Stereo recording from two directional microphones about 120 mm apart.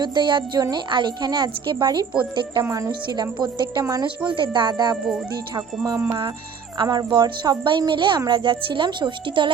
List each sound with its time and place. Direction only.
0.0 s a woman's voice: 40° right (ahead or behind)
2.6 s a woman's voice: 25° right (ahead or behind)
4.3 s a woman's voice: 40° right (ahead or behind)
6.7 s a woman's voice: 40° right (ahead or behind)